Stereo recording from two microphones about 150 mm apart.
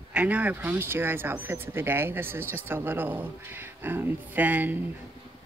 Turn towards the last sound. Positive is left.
turn(degrees=-10)  # may be behind; listen again after turning